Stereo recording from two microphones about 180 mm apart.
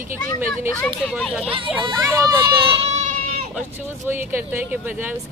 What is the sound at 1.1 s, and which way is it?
Speech, centre (ahead or behind).